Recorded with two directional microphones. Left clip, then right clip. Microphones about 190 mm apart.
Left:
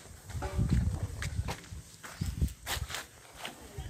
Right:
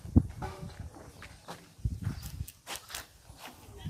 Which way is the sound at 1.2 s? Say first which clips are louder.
Left 10 dB; 60° left (ahead or behind).